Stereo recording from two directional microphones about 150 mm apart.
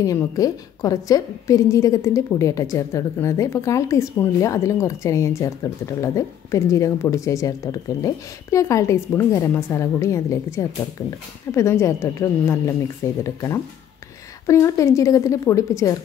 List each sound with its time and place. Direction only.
0.0 s a woman's voice: 20° left (ahead or behind)